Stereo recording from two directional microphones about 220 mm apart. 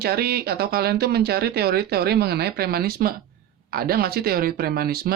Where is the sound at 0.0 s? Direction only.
45° right (ahead or behind).